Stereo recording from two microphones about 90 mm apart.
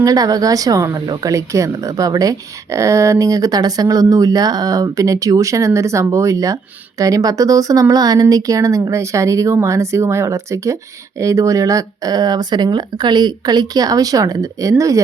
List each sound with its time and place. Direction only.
0.0 s speech: 40° right (ahead or behind)